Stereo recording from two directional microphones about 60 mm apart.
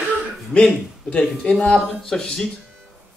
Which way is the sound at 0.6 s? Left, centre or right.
Centre.